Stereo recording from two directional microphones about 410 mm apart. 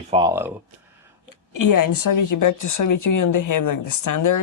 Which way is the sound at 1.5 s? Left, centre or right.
Left.